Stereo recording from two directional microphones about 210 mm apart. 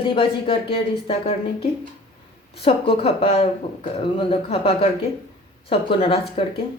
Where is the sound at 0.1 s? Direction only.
25° left (ahead or behind).